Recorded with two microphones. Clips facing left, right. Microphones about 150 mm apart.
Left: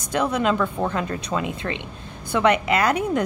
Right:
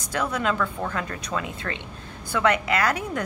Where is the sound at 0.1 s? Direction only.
20° left (ahead or behind).